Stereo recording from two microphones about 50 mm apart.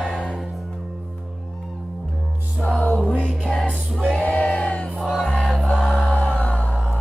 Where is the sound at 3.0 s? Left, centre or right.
Left.